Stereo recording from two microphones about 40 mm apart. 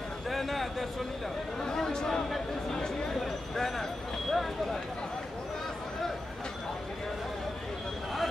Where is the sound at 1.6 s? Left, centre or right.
Centre.